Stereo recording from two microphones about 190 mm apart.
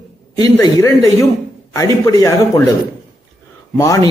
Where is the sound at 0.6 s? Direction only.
15° left (ahead or behind).